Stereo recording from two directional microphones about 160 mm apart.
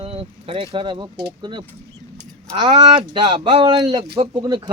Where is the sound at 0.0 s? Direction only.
35° right (ahead or behind).